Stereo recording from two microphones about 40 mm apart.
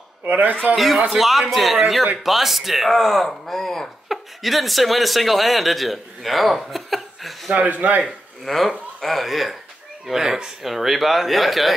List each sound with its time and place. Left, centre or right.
0.2 s a man's voice: right
0.7 s speech: centre
4.1 s speech: centre
7.5 s speech: right
8.5 s speech: centre